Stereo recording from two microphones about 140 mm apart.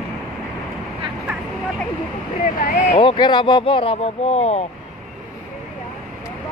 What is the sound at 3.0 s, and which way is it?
Speech, 35° left (ahead or behind).